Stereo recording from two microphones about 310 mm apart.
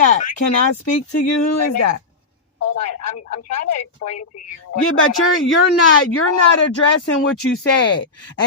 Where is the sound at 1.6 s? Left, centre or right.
Left.